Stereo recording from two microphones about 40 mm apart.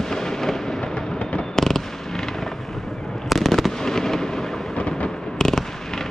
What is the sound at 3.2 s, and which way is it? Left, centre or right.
Fireworks, centre.